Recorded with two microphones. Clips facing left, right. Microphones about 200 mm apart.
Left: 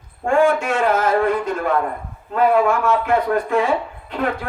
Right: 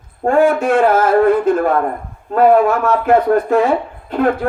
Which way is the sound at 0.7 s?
50° right (ahead or behind).